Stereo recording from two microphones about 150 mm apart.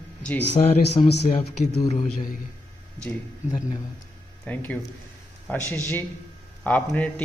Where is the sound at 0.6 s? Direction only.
40° left (ahead or behind).